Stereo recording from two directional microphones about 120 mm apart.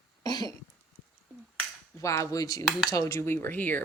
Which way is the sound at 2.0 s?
25° left (ahead or behind).